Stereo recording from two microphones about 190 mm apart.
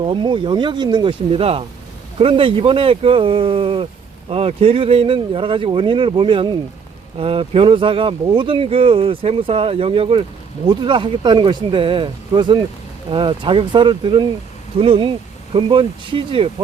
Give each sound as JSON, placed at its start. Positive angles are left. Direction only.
{"t": 0.0, "sound": "speech", "side_deg": -25}